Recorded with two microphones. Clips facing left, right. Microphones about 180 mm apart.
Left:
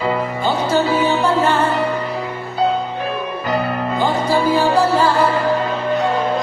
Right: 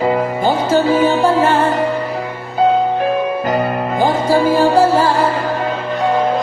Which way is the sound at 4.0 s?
45° right (ahead or behind).